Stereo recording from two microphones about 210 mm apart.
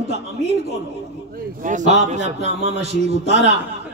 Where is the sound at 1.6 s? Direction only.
35° right (ahead or behind).